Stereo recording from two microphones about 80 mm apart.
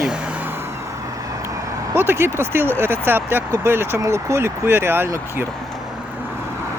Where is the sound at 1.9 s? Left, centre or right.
Right.